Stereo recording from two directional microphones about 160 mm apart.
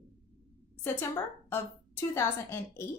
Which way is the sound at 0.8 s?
15° left (ahead or behind).